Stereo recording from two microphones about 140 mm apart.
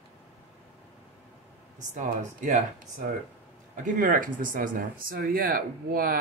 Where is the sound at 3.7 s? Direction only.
65° right (ahead or behind).